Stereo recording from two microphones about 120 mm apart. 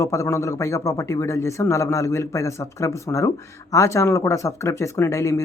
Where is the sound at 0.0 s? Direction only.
25° left (ahead or behind).